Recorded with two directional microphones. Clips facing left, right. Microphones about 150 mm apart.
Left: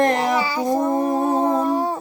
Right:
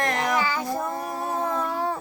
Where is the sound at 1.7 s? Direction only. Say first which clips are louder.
Left 5 dB; 20° left (ahead or behind).